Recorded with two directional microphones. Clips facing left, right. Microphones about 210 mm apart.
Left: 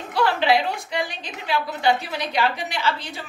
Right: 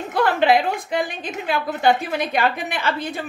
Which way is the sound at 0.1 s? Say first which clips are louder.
Right 3 dB; 50° right (ahead or behind).